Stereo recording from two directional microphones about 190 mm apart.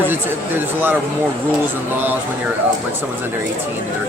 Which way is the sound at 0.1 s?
10° right (ahead or behind).